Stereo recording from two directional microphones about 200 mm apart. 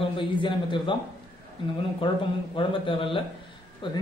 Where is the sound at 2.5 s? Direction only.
25° left (ahead or behind).